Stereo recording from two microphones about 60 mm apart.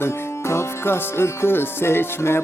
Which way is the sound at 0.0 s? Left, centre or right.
Left.